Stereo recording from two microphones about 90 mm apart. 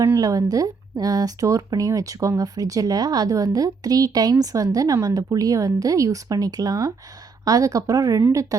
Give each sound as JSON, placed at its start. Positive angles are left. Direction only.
{"t": 0.0, "sound": "speech", "side_deg": -35}